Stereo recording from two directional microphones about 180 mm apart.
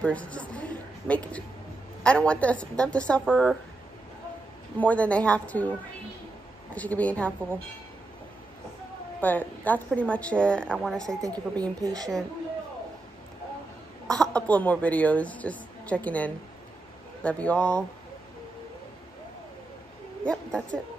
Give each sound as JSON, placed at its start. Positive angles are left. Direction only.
{"t": 0.0, "sound": "a sound", "side_deg": 5}
{"t": 2.0, "sound": "a woman's voice", "side_deg": 5}
{"t": 4.7, "sound": "speech", "side_deg": 10}
{"t": 6.7, "sound": "speech", "side_deg": 10}
{"t": 9.2, "sound": "a woman's voice", "side_deg": 10}
{"t": 11.1, "sound": "a woman's voice", "side_deg": -20}
{"t": 14.0, "sound": "speech", "side_deg": 5}
{"t": 20.2, "sound": "a woman's voice", "side_deg": 5}